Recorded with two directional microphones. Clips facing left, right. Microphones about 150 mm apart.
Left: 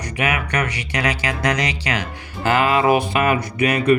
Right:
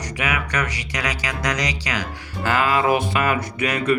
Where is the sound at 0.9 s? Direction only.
30° left (ahead or behind).